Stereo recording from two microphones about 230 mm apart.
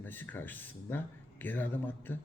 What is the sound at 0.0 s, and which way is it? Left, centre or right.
Speech, centre.